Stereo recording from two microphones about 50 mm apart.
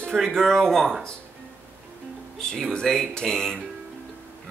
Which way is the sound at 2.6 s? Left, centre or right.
Centre.